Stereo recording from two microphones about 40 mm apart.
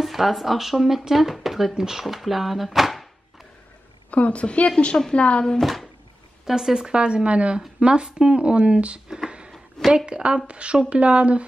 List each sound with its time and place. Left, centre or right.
0.0 s speech: centre
4.1 s a woman's voice: left
5.6 s speech: centre
6.4 s a woman's voice: centre
9.1 s speech: centre
9.9 s a woman's voice: right